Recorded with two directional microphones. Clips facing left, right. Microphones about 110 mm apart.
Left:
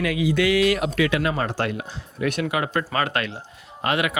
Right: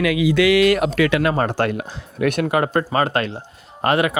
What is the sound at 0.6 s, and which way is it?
Speech, 55° right (ahead or behind).